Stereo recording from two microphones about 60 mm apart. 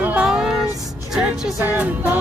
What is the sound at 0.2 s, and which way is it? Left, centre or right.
Music, centre.